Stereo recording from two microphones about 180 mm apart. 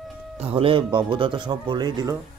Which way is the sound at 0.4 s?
30° right (ahead or behind).